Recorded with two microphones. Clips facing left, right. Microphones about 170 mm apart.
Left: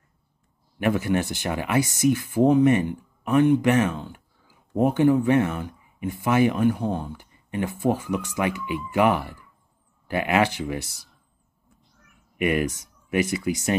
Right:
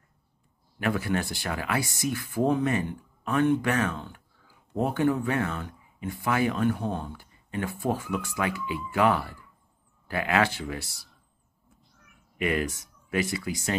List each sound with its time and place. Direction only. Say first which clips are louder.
0.7 s speech: left 5 dB; 20° left (ahead or behind)
12.4 s speech: left 4 dB; 20° left (ahead or behind)